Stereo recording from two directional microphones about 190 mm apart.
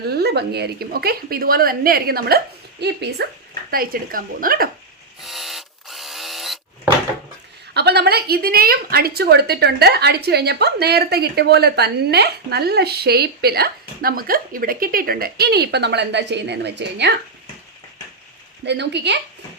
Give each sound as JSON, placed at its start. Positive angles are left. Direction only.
{"t": 0.2, "sound": "a woman's voice", "side_deg": -60}
{"t": 3.7, "sound": "a woman's voice", "side_deg": -50}
{"t": 5.2, "sound": "electric toothbrush", "side_deg": 0}
{"t": 7.7, "sound": "a woman's voice", "side_deg": -60}
{"t": 18.6, "sound": "a woman's voice", "side_deg": -65}